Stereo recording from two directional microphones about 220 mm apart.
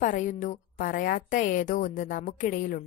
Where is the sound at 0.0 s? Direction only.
35° left (ahead or behind).